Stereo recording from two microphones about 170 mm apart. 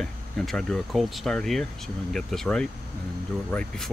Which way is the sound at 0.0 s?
5° left (ahead or behind).